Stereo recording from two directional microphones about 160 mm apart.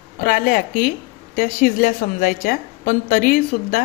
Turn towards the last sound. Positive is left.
turn(degrees=60)  # may be behind; listen again after turning